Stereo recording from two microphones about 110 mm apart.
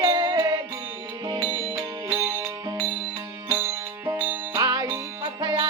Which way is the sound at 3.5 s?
20° right (ahead or behind).